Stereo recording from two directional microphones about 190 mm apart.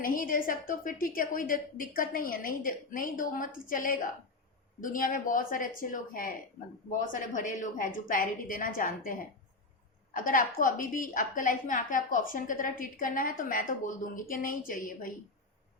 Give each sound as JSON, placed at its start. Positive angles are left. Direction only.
{"t": 0.0, "sound": "a woman's voice", "side_deg": 45}